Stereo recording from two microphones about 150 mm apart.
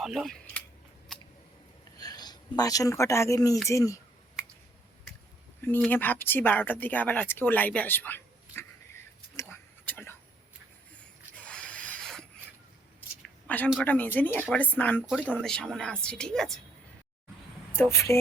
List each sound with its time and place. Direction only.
0.0 s speech: centre (ahead or behind)
2.0 s speech: 25° left (ahead or behind)
5.9 s speech: 10° left (ahead or behind)
9.8 s a sound: 15° left (ahead or behind)
11.4 s rub: 10° left (ahead or behind)
13.2 s a sound: 10° left (ahead or behind)
13.8 s speech: 10° left (ahead or behind)
15.0 s a woman's voice: 5° right (ahead or behind)
17.9 s speech: 20° left (ahead or behind)